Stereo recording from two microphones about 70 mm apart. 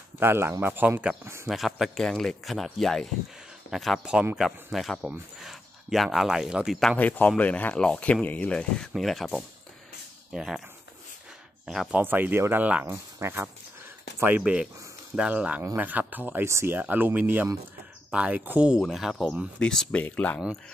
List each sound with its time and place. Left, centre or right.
0.2 s speech: right
1.2 s speech: right
1.5 s speech: centre
4.0 s speech: centre
4.6 s speech: centre
7.0 s speech: left
8.9 s speech: centre
11.6 s speech: centre
12.0 s speech: right
14.2 s speech: right
16.4 s speech: right
16.7 s speech: right
18.8 s speech: centre
20.1 s speech: left